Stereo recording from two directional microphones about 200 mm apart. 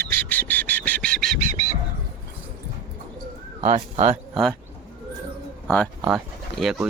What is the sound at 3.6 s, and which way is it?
Speech, 40° right (ahead or behind).